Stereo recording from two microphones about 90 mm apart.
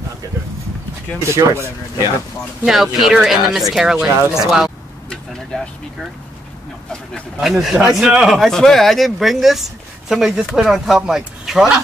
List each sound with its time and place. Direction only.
1.2 s speech: 30° right (ahead or behind)
2.6 s speech: 5° right (ahead or behind)
7.3 s speech: 5° right (ahead or behind)